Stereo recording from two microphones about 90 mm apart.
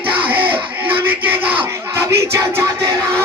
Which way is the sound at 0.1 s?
75° right (ahead or behind).